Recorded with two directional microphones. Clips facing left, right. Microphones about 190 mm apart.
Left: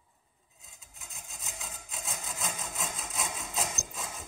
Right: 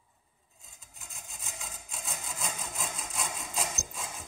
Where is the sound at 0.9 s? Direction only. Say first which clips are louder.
Even; centre (ahead or behind).